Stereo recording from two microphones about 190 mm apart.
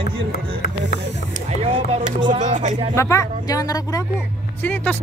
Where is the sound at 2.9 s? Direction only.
15° left (ahead or behind).